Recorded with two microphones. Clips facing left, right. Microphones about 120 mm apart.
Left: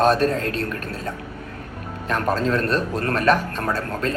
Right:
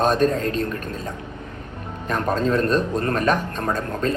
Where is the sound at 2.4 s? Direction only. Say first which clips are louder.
Right 2 dB; 20° right (ahead or behind).